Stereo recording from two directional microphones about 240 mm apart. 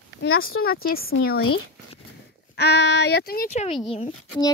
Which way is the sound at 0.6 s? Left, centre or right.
Left.